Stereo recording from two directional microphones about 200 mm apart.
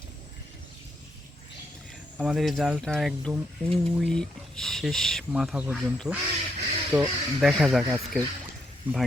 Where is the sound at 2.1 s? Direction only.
5° right (ahead or behind).